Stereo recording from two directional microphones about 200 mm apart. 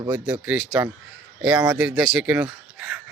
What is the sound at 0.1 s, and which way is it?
A man's voice, 5° right (ahead or behind).